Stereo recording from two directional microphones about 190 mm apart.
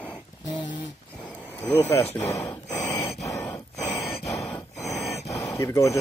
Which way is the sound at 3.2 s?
15° left (ahead or behind).